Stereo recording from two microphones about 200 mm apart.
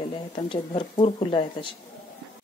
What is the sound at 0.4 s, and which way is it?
Speech, 25° left (ahead or behind).